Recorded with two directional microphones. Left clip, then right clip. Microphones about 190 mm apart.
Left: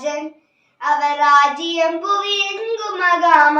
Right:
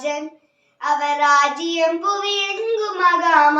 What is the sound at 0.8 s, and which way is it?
Child singing, 15° right (ahead or behind).